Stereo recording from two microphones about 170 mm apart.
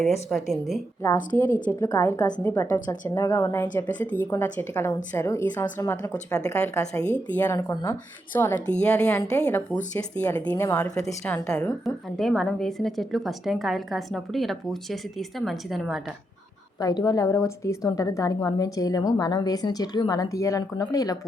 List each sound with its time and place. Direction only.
0.0 s a woman's voice: centre (ahead or behind)
1.3 s a woman's voice: 25° right (ahead or behind)
1.8 s a woman's voice: 20° left (ahead or behind); by 16.0 s centre (ahead or behind)
16.8 s a woman's voice: 20° left (ahead or behind)